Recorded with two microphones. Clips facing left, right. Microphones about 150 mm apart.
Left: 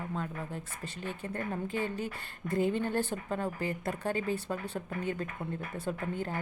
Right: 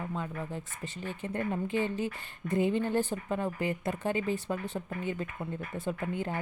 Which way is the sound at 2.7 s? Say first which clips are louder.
Right 2 dB; 15° right (ahead or behind).